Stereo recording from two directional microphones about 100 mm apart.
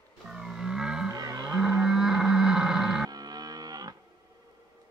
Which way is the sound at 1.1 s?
35° right (ahead or behind).